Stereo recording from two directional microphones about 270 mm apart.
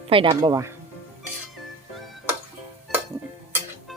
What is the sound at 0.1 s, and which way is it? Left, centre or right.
Dishes, centre.